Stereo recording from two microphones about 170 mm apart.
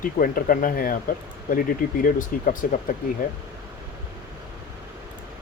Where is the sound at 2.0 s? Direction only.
50° left (ahead or behind).